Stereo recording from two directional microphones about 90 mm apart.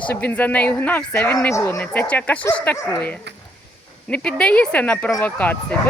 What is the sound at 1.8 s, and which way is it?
Speech, 20° left (ahead or behind).